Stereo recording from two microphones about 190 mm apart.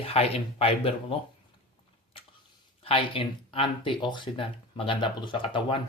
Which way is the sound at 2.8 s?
30° left (ahead or behind).